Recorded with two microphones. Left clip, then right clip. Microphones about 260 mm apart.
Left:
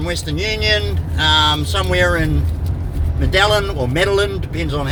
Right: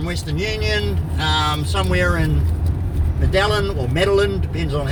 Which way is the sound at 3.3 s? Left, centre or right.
Left.